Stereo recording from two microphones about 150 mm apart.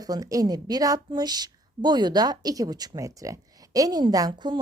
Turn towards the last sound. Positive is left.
turn(degrees=-30)  # may be behind; listen again after turning